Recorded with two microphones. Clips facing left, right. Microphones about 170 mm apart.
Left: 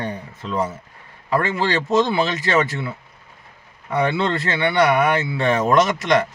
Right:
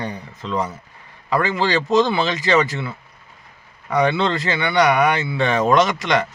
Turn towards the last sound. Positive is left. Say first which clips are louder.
# even
turn(degrees=-90)